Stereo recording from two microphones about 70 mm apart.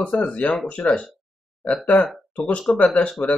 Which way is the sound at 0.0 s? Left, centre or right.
Centre.